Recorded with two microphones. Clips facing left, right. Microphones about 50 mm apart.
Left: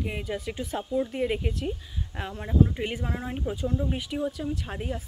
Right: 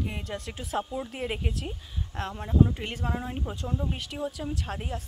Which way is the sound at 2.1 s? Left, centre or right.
Centre.